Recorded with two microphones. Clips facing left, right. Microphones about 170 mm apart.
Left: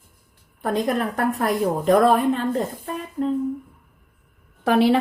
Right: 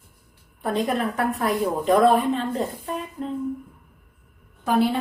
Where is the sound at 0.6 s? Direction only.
45° left (ahead or behind).